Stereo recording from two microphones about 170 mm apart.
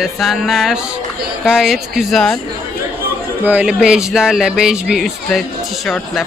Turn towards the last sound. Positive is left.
turn(degrees=0)  # may be behind; listen again after turning